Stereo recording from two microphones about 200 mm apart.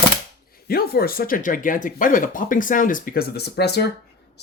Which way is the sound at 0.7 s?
50° left (ahead or behind).